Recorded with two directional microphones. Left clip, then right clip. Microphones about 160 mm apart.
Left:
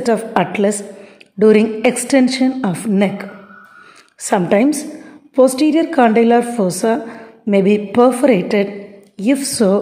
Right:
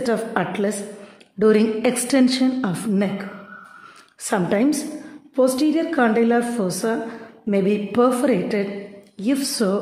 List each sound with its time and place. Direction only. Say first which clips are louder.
0.3 s a woman's voice: left 7 dB; 20° left (ahead or behind)